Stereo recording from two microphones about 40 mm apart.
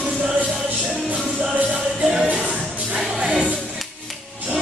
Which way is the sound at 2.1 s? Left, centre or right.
Right.